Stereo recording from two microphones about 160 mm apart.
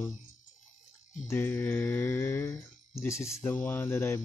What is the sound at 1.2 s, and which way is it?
Mantra, 15° left (ahead or behind).